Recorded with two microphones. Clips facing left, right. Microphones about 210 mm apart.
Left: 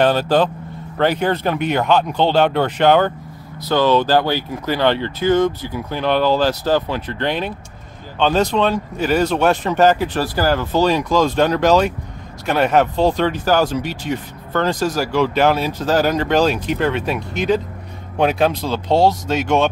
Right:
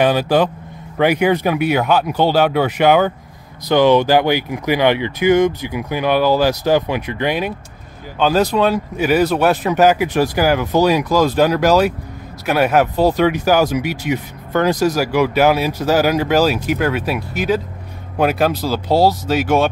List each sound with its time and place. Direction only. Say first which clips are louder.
0.0 s speech: right 1 dB; 10° right (ahead or behind)